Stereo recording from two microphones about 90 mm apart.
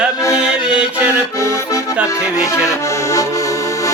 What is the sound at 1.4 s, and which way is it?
Accordion, 35° left (ahead or behind).